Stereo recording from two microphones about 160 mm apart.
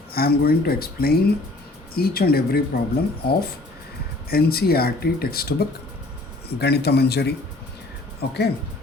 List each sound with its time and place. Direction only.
0.1 s speech: 70° left (ahead or behind)
6.6 s speech: 90° left